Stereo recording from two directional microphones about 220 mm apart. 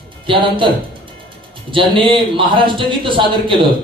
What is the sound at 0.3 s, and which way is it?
Speech, 25° right (ahead or behind).